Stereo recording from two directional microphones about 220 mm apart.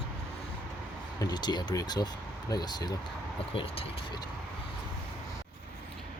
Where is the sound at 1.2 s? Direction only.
20° left (ahead or behind).